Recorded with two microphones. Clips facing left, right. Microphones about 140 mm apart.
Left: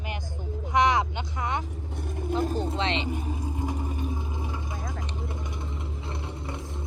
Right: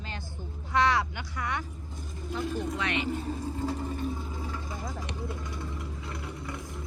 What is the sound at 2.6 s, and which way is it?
Vehicle, 25° left (ahead or behind).